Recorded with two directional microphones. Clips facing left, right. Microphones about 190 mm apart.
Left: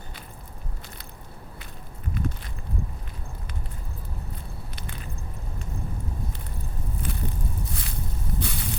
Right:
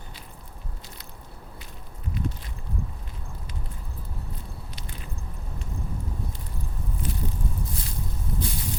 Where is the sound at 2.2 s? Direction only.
50° left (ahead or behind).